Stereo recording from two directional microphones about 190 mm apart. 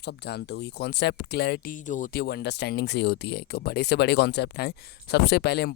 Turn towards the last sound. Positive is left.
turn(degrees=60)  # may be behind; listen again after turning